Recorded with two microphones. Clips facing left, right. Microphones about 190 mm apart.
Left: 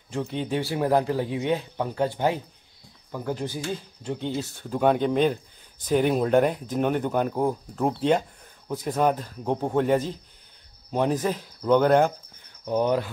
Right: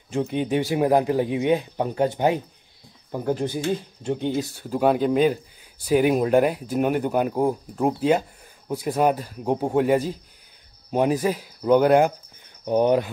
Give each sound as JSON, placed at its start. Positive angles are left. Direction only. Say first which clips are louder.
{"t": 0.1, "sound": "speech", "louder": "right 4 dB", "side_deg": -15}
{"t": 4.4, "sound": "speech", "louder": "right 2 dB", "side_deg": -5}